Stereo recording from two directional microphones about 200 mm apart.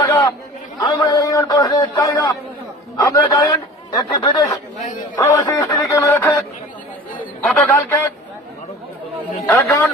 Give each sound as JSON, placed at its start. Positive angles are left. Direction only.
{"t": 0.0, "sound": "chatter", "side_deg": 20}
{"t": 0.8, "sound": "a man's voice", "side_deg": 20}
{"t": 7.5, "sound": "speech", "side_deg": 10}
{"t": 9.5, "sound": "speech", "side_deg": 15}